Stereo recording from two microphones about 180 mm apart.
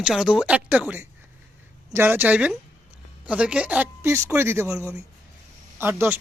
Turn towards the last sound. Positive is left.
turn(degrees=-10)  # may be behind; listen again after turning